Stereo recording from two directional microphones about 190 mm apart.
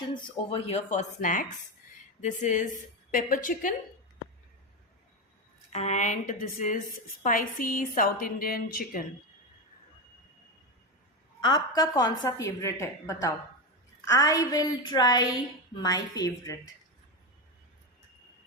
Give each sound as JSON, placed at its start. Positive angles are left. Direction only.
{"t": 0.1, "sound": "a woman's voice", "side_deg": 25}
{"t": 5.7, "sound": "a woman's voice", "side_deg": 35}
{"t": 11.3, "sound": "a woman's voice", "side_deg": 20}